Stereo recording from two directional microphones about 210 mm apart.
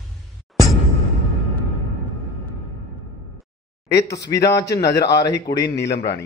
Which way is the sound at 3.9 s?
55° left (ahead or behind).